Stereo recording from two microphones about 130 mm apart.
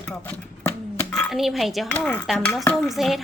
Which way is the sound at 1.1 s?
Centre (ahead or behind).